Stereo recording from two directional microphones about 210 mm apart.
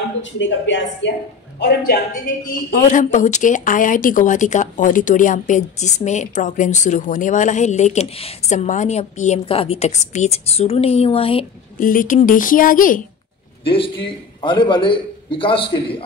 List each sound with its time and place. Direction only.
0.2 s speech: 60° left (ahead or behind)
2.7 s speech: 35° left (ahead or behind)
11.8 s speech: 40° left (ahead or behind)
13.7 s a man's voice: 25° left (ahead or behind)